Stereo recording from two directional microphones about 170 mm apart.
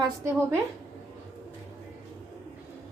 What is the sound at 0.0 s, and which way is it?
Speech, 15° right (ahead or behind).